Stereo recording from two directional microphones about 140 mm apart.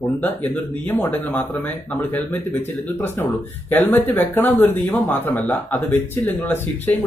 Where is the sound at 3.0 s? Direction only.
15° left (ahead or behind).